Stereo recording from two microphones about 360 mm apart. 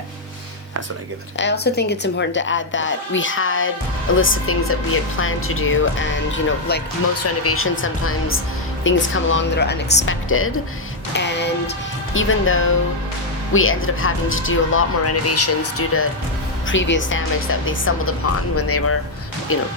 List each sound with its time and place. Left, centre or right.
1.4 s speech: left
11.1 s music: left
12.1 s speech: left